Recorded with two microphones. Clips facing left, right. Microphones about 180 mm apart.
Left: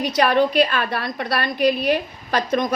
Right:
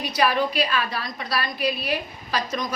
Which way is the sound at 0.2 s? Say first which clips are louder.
Left 5 dB; 55° left (ahead or behind).